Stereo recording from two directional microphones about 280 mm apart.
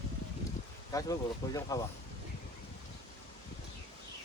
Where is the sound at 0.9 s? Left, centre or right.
Centre.